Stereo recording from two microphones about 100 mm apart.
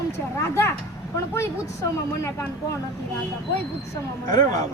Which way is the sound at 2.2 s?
30° left (ahead or behind).